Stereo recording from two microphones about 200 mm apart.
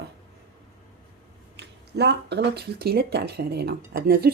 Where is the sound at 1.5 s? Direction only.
55° right (ahead or behind).